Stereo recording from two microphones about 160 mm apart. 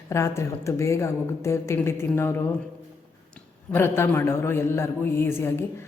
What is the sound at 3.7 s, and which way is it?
A woman's voice, 15° left (ahead or behind).